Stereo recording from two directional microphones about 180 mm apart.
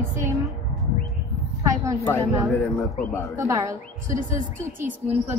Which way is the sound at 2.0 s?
15° left (ahead or behind).